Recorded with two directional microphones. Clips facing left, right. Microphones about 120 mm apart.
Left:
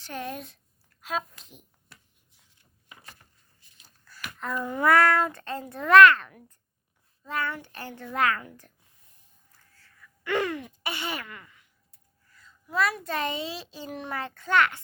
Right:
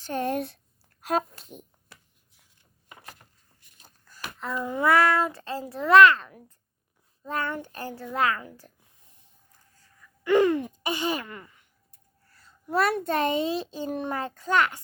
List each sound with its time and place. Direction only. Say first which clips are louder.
0.0 s a child's voice: right 8 dB; 45° right (ahead or behind)
4.2 s babbling: even; 25° right (ahead or behind)
4.9 s speech: even; centre (ahead or behind)
5.9 s a woman's voice: even; 25° right (ahead or behind)
7.3 s a child's voice: right 1 dB; 45° right (ahead or behind)
8.1 s a woman's voice: even; 25° right (ahead or behind)
9.8 s a sound: right 6 dB; 15° right (ahead or behind)
10.8 s a woman's voice: right 4 dB; 15° right (ahead or behind)
11.3 s speech: right 4 dB; 30° right (ahead or behind)
12.5 s a sound: right 5 dB; 35° right (ahead or behind)
12.9 s a child's voice: right 6 dB; 50° right (ahead or behind)